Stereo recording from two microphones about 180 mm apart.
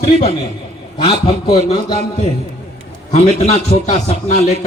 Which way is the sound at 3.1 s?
40° left (ahead or behind).